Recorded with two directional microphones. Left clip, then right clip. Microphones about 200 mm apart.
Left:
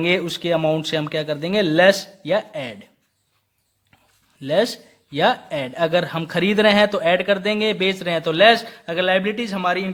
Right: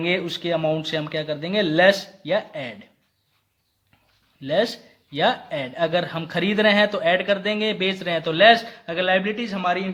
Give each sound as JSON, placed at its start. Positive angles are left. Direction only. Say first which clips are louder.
{"t": 0.0, "sound": "speech", "louder": "left 3 dB", "side_deg": 35}
{"t": 4.4, "sound": "speech", "louder": "left 2 dB", "side_deg": 35}